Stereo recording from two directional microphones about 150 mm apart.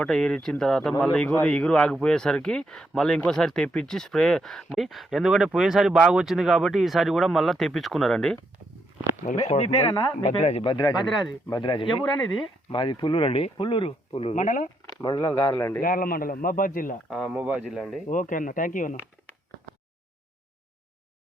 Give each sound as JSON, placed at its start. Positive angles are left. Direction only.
{"t": 0.0, "sound": "speech", "side_deg": 5}
{"t": 9.5, "sound": "speech", "side_deg": 45}
{"t": 10.6, "sound": "speech", "side_deg": 30}
{"t": 14.3, "sound": "speech", "side_deg": 60}
{"t": 14.8, "sound": "speech", "side_deg": 25}
{"t": 15.4, "sound": "a man's voice", "side_deg": 10}
{"t": 15.8, "sound": "a man's voice", "side_deg": 75}
{"t": 17.1, "sound": "speech", "side_deg": -5}
{"t": 17.6, "sound": "speech", "side_deg": 5}
{"t": 18.1, "sound": "speech", "side_deg": 60}